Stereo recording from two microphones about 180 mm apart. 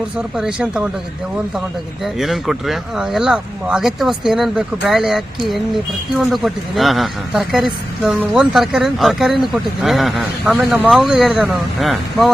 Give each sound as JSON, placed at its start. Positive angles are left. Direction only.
{"t": 0.2, "sound": "speech", "side_deg": -5}
{"t": 2.1, "sound": "speech", "side_deg": 0}